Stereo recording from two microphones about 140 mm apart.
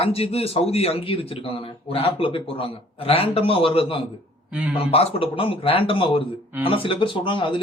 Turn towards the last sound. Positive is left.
turn(degrees=35)  # may be behind; listen again after turning